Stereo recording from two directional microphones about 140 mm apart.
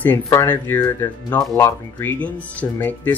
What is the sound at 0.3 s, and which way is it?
Speech, 20° left (ahead or behind).